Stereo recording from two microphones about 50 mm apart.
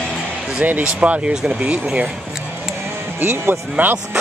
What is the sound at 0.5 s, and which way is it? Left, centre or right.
Speech, right.